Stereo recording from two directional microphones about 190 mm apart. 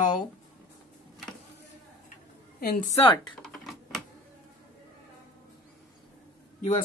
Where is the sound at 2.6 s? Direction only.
40° left (ahead or behind).